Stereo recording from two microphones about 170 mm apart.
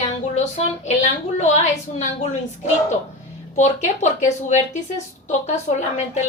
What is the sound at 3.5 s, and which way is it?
Speech, 45° left (ahead or behind).